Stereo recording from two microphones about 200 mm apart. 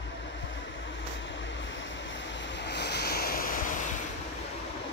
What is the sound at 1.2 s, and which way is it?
Waves, 65° left (ahead or behind).